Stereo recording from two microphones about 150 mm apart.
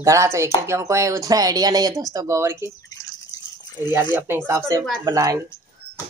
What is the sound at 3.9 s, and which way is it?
Speech, 15° right (ahead or behind).